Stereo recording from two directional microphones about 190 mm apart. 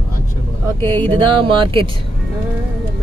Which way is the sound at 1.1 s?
25° right (ahead or behind).